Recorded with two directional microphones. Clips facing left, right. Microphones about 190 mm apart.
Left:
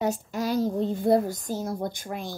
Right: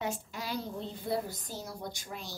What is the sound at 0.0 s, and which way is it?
Speech, 40° left (ahead or behind).